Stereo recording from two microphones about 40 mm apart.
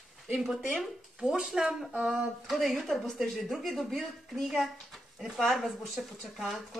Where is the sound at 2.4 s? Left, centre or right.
Centre.